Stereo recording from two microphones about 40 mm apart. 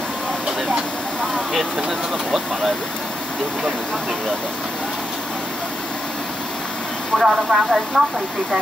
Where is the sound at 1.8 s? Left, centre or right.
Centre.